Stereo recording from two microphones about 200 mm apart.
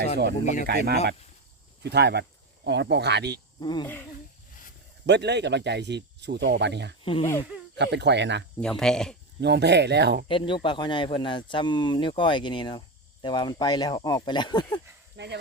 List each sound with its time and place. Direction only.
0.2 s speech: 55° right (ahead or behind)
1.8 s speech: 55° right (ahead or behind)
3.6 s speech: 20° left (ahead or behind)
5.0 s speech: 60° right (ahead or behind)
7.0 s speech: 25° left (ahead or behind)
7.8 s speech: 60° right (ahead or behind)
8.6 s speech: 5° left (ahead or behind)
9.4 s speech: 55° right (ahead or behind)
10.2 s speech: 25° left (ahead or behind)
15.1 s speech: 60° right (ahead or behind)